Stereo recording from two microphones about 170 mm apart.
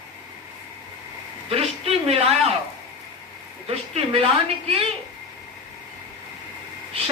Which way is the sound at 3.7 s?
35° right (ahead or behind).